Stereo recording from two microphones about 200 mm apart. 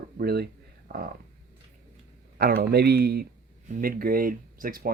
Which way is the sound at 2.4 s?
50° right (ahead or behind).